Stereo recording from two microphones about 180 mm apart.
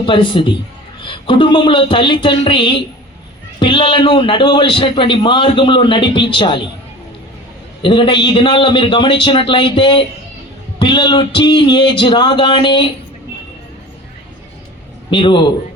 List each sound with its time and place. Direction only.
0.0 s a man's voice: 25° left (ahead or behind)
7.8 s a man's voice: 25° left (ahead or behind)
15.1 s a man's voice: 25° left (ahead or behind)